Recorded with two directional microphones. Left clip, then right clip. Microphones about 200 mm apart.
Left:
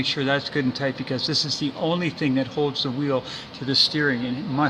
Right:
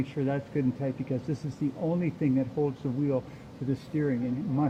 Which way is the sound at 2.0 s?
55° left (ahead or behind).